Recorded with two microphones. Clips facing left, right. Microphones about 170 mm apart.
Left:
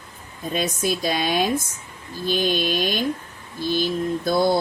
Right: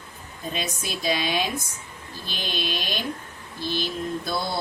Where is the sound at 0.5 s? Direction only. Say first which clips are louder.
Left 9 dB; 50° left (ahead or behind).